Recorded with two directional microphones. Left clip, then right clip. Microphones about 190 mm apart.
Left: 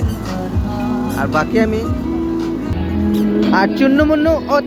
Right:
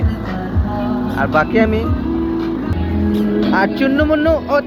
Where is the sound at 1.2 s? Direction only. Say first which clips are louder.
Right 2 dB; 5° left (ahead or behind).